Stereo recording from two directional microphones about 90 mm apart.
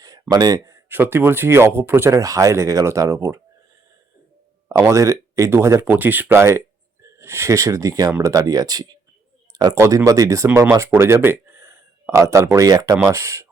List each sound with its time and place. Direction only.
0.0 s a sound: 45° right (ahead or behind)
0.9 s speech: 20° right (ahead or behind)
2.1 s speech: 40° right (ahead or behind)
4.9 s speech: 35° right (ahead or behind)
9.5 s a sound: 45° right (ahead or behind)
9.7 s speech: 35° right (ahead or behind)